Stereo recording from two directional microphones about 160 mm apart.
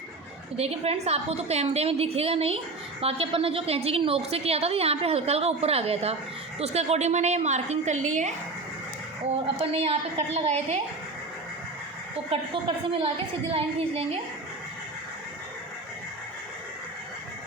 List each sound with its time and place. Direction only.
0.5 s a woman's voice: 40° right (ahead or behind)
9.6 s a woman's voice: 35° right (ahead or behind)
12.3 s a woman's voice: 35° right (ahead or behind)